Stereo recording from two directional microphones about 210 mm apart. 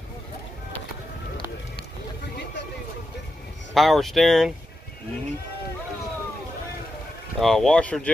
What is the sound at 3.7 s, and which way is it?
Speech, centre (ahead or behind).